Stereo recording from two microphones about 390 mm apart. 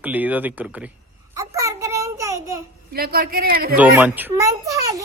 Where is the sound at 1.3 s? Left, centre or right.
Centre.